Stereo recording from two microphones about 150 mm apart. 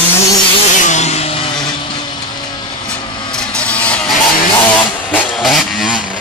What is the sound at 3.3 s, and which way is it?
Vehicle, 5° left (ahead or behind).